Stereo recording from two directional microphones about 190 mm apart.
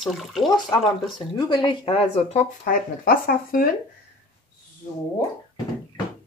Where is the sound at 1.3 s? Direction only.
25° left (ahead or behind); by 3.7 s 50° left (ahead or behind).